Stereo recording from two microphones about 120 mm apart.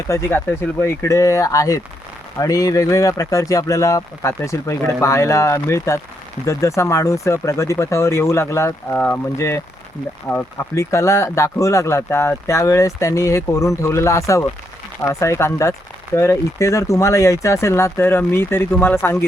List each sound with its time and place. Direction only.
0.1 s speech: 20° left (ahead or behind)
10.8 s speech: 25° left (ahead or behind)